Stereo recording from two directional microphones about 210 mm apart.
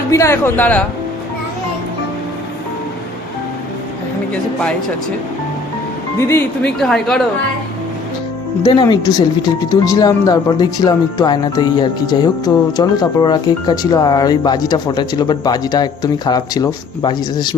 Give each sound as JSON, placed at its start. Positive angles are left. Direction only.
{"t": 0.1, "sound": "speech", "side_deg": 10}
{"t": 6.1, "sound": "speech", "side_deg": 10}
{"t": 8.6, "sound": "speech", "side_deg": 20}